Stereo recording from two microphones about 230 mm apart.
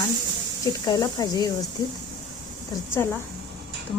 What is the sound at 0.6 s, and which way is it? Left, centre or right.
Speech, centre.